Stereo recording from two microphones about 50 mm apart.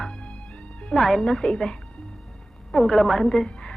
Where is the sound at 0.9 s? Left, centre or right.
Centre.